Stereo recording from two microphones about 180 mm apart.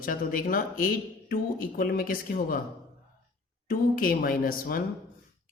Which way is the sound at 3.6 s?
50° left (ahead or behind).